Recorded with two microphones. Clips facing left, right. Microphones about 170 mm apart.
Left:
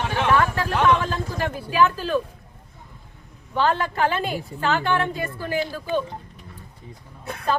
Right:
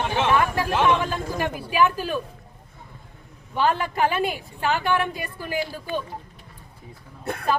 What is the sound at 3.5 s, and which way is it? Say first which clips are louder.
Speech: left 1 dB; 15° right (ahead or behind).